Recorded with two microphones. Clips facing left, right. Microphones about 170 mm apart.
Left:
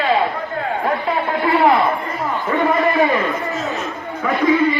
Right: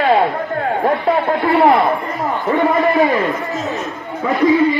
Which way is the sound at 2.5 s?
20° right (ahead or behind).